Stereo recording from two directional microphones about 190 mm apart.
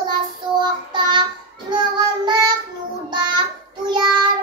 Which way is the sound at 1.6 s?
20° right (ahead or behind).